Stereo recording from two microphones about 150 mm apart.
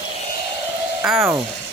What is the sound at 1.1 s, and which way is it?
Speech, 15° right (ahead or behind).